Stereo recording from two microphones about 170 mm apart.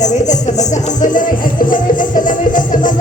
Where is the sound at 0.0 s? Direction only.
45° left (ahead or behind).